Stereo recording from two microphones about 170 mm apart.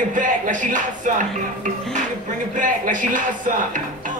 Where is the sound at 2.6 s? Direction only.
50° right (ahead or behind).